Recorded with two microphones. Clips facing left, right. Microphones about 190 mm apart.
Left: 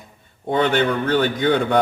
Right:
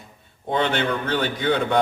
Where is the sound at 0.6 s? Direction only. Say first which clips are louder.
Left 5 dB; 50° left (ahead or behind).